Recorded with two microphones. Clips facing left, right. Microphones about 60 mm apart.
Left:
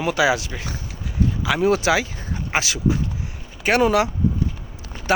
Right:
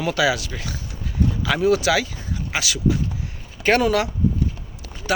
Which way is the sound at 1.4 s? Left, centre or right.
Centre.